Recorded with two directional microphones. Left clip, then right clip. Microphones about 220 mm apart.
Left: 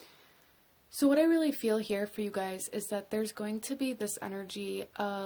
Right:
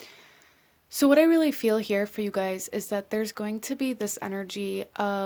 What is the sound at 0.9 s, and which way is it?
Speech, 40° right (ahead or behind).